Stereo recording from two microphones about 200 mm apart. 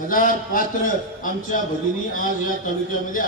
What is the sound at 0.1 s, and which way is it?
Speech, 45° left (ahead or behind).